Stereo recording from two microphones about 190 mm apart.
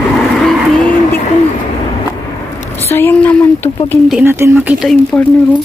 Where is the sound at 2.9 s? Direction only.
10° left (ahead or behind).